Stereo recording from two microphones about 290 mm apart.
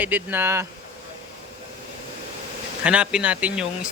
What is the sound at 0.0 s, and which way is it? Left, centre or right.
Speech, centre.